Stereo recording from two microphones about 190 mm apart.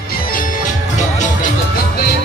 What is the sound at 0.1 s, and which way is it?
Music, 45° left (ahead or behind).